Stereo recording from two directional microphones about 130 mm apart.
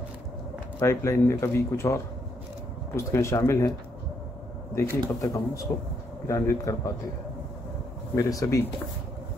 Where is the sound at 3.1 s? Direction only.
20° left (ahead or behind).